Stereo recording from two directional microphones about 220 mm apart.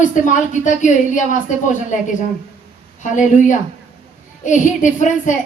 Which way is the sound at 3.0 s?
35° left (ahead or behind).